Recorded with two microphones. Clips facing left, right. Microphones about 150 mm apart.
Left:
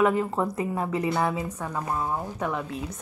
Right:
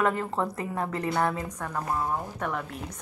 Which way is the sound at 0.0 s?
10° left (ahead or behind).